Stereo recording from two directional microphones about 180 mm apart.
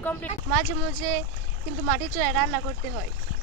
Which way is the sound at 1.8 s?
5° left (ahead or behind).